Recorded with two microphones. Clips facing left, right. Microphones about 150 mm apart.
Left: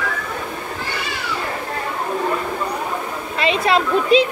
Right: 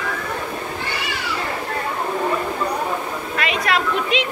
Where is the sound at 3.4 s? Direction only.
30° left (ahead or behind).